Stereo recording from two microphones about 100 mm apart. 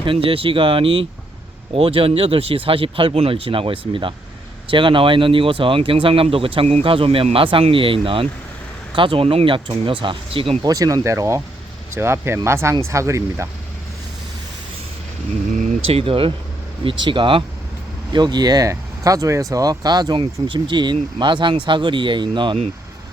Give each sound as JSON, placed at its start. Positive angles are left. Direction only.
{"t": 0.0, "sound": "speech", "side_deg": -60}
{"t": 10.6, "sound": "speech", "side_deg": -35}
{"t": 15.9, "sound": "speech", "side_deg": -70}
{"t": 16.8, "sound": "speech", "side_deg": -55}
{"t": 18.1, "sound": "speech", "side_deg": -45}
{"t": 20.1, "sound": "speech", "side_deg": -50}